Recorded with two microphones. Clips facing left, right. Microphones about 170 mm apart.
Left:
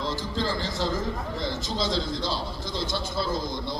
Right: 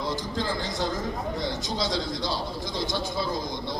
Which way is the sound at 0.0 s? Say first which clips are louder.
Even; 15° right (ahead or behind).